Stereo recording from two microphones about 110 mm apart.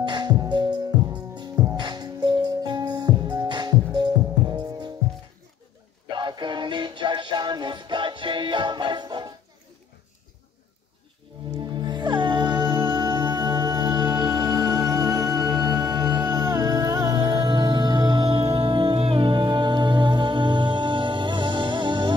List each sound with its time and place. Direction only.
0.0 s music: 40° right (ahead or behind)
6.0 s music: 45° right (ahead or behind)
11.5 s music: 40° right (ahead or behind)